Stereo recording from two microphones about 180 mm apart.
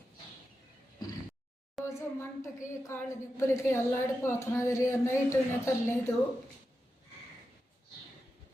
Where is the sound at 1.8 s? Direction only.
15° left (ahead or behind).